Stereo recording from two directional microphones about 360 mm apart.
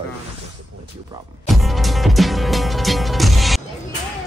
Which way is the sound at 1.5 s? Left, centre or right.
Centre.